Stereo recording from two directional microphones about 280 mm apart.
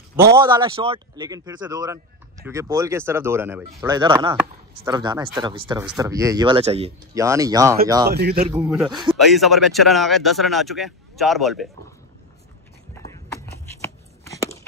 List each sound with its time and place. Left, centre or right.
0.1 s speech: centre
8.1 s a man's voice: right
8.6 s speech: centre
12.9 s a sound: centre